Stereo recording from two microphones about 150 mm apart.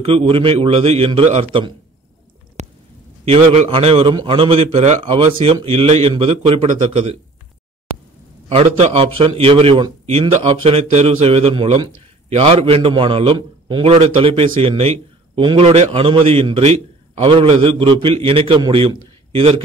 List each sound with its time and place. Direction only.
0.0 s a man's voice: 40° right (ahead or behind)
2.6 s a sound: 50° right (ahead or behind)
3.3 s a man's voice: 40° right (ahead or behind)
8.5 s a man's voice: 45° right (ahead or behind)